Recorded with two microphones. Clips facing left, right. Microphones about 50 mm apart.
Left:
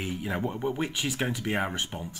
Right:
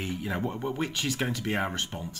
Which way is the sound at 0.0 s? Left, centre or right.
Centre.